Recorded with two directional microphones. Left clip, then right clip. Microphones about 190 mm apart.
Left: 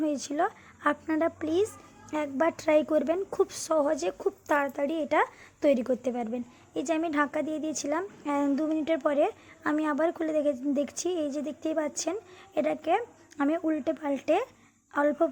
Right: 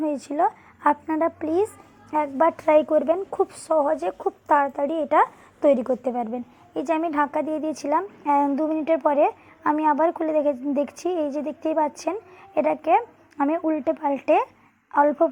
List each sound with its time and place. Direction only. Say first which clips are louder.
0.0 s a woman's voice: right 6 dB; 10° left (ahead or behind)
7.9 s a woman's voice: right 11 dB; centre (ahead or behind)